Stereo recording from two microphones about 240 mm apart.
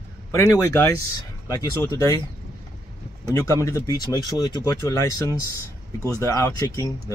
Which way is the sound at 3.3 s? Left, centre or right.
Centre.